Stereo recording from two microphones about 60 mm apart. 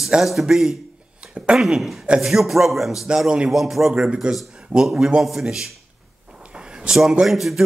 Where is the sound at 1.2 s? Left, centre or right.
Centre.